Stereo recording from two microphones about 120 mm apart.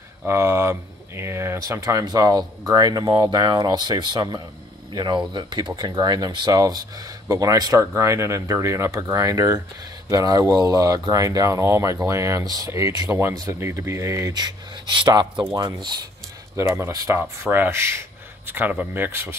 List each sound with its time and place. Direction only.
0.3 s speech: 20° right (ahead or behind)
13.1 s speech: 20° right (ahead or behind); by 16.0 s 35° right (ahead or behind)
16.5 s speech: 20° right (ahead or behind)
17.2 s speech: 15° right (ahead or behind)